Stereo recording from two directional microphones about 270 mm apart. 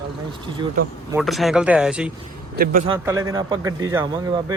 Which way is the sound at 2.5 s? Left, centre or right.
Right.